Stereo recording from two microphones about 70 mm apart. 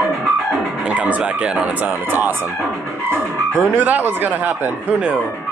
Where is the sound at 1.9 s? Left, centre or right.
Right.